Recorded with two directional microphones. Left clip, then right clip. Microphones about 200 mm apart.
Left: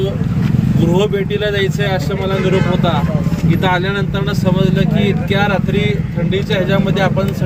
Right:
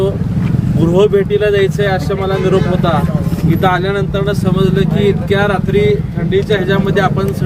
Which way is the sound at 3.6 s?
5° right (ahead or behind).